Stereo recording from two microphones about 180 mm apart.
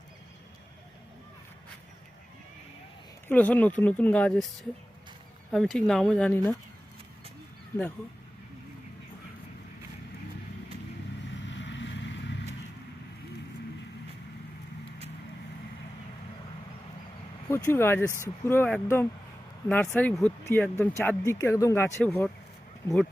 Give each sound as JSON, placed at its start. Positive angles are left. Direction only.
{"t": 3.2, "sound": "speech", "side_deg": 10}
{"t": 5.5, "sound": "speech", "side_deg": 0}
{"t": 11.4, "sound": "vehicle", "side_deg": 90}
{"t": 17.5, "sound": "speech", "side_deg": 15}